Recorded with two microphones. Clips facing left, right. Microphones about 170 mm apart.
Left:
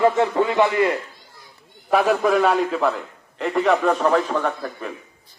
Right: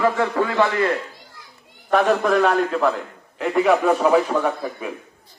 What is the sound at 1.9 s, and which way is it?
A man's voice, 5° left (ahead or behind).